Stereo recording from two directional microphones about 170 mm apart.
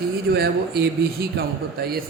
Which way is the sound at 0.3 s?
65° right (ahead or behind).